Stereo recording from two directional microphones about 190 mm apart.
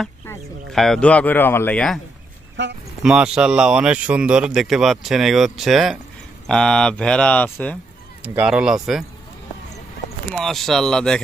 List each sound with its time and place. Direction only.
0.7 s speech: centre (ahead or behind)
2.6 s speech: 70° right (ahead or behind)
3.0 s speech: 5° right (ahead or behind)
8.2 s speech: 10° right (ahead or behind)
10.2 s speech: centre (ahead or behind)